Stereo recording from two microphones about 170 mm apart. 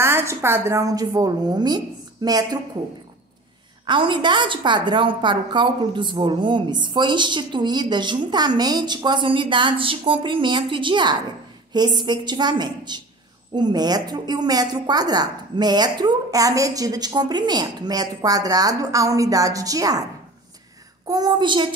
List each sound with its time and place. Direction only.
0.0 s a woman's voice: 15° right (ahead or behind)
3.8 s a woman's voice: 25° right (ahead or behind)
21.1 s a woman's voice: 25° right (ahead or behind)